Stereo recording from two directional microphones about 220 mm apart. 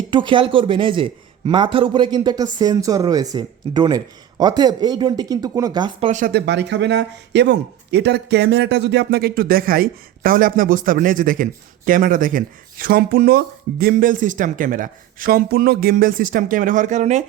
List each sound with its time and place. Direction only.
0.1 s a man's voice: 20° right (ahead or behind)
6.1 s speech: 35° right (ahead or behind)